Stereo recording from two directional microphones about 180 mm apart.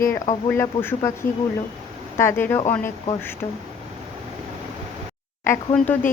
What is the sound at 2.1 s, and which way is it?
Speech, 10° left (ahead or behind).